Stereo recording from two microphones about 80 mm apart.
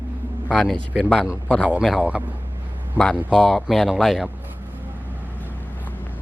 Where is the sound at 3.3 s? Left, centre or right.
Centre.